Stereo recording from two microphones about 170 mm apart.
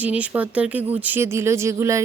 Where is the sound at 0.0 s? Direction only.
10° right (ahead or behind).